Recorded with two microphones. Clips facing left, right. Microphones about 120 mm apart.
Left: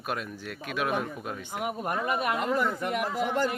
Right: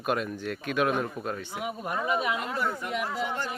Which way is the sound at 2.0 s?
50° left (ahead or behind).